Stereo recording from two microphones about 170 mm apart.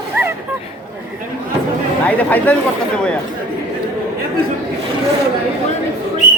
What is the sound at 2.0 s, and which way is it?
Speech, 10° left (ahead or behind).